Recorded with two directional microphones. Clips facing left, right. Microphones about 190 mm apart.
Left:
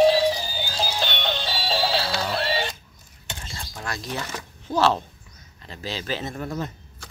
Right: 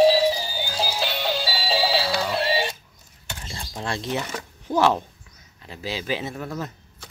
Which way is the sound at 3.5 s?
30° right (ahead or behind).